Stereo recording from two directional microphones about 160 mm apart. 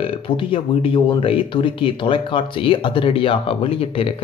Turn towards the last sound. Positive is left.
turn(degrees=35)  # may be behind; listen again after turning